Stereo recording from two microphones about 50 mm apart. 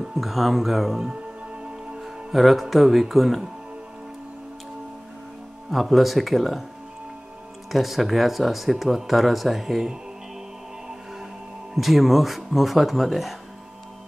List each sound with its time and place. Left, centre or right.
0.1 s speech: centre
1.5 s music: right
2.0 s speech: centre
5.7 s speech: centre
7.7 s speech: centre
11.7 s speech: centre